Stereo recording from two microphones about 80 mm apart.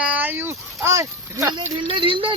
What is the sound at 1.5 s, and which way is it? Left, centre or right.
Speech, right.